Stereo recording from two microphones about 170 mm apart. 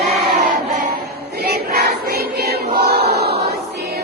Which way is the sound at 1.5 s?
70° right (ahead or behind).